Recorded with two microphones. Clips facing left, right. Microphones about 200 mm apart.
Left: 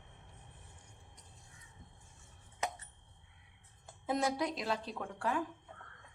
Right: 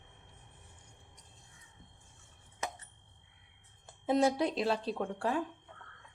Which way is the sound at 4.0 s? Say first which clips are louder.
Right 6 dB; 30° right (ahead or behind).